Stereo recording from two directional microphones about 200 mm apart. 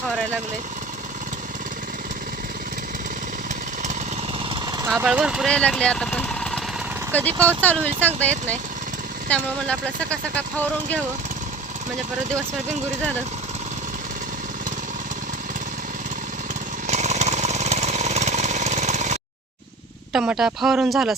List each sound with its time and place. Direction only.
4.4 s a sound: 20° right (ahead or behind)
4.9 s speech: 5° right (ahead or behind)
16.8 s jackhammer: 35° right (ahead or behind)
20.1 s speech: 5° right (ahead or behind)